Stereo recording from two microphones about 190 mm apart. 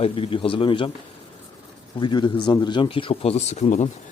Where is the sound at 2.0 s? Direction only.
25° left (ahead or behind).